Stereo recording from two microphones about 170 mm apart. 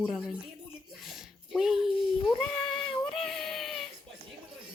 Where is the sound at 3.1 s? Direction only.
Centre (ahead or behind).